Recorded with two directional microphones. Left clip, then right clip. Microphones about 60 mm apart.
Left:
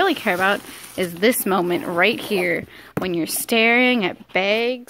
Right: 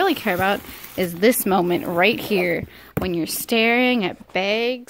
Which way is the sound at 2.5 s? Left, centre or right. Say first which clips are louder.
Left 1 dB; centre.